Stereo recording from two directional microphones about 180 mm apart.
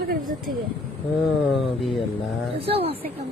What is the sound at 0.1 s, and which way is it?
Speech, 55° right (ahead or behind).